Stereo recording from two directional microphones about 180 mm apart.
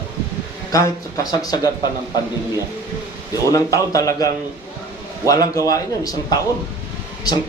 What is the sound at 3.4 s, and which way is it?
Speech, 20° left (ahead or behind).